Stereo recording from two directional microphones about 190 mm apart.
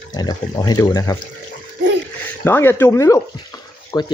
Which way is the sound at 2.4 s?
10° left (ahead or behind).